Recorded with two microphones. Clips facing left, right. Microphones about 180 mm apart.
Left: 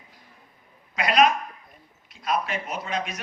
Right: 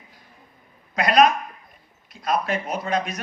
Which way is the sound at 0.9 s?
40° right (ahead or behind).